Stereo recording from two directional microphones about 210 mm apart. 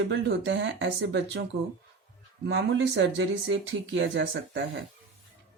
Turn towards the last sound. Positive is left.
turn(degrees=-55)  # may be behind; listen again after turning